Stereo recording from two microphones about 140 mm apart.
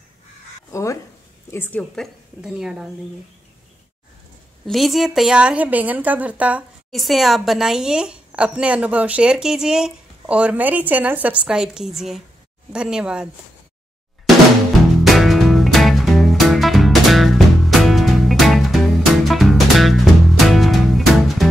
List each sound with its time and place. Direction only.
0.7 s speech: 20° left (ahead or behind)
2.4 s a woman's voice: 5° right (ahead or behind)
4.6 s a woman's voice: centre (ahead or behind)
15.0 s music: centre (ahead or behind)